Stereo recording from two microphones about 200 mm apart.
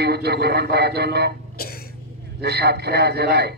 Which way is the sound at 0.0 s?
55° right (ahead or behind).